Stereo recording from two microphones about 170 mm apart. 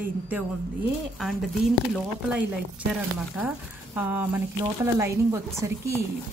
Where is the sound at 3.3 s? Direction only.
10° right (ahead or behind).